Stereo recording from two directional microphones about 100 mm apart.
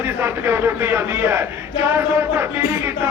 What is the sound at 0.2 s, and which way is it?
A man's voice, 20° right (ahead or behind).